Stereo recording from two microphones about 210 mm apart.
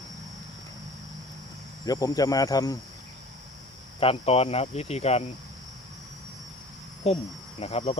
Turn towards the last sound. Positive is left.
turn(degrees=30)  # may be behind; listen again after turning